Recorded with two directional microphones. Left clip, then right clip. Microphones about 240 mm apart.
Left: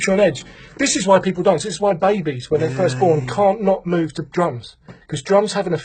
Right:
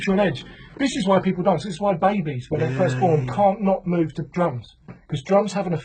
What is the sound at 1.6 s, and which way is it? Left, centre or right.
Speech, left.